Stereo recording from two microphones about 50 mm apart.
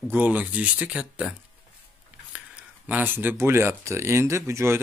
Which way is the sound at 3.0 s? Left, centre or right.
Right.